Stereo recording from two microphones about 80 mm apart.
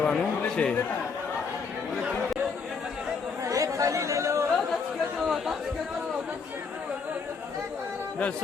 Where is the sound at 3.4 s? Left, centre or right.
Right.